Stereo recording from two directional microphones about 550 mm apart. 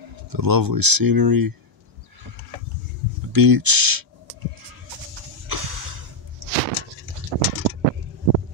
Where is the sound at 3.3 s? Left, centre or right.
Right.